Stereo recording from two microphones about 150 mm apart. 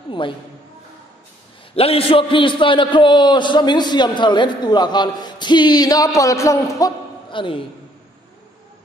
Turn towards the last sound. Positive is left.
turn(degrees=35)  # may be behind; listen again after turning